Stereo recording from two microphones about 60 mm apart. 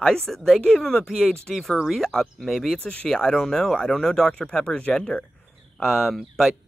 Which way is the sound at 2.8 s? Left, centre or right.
Left.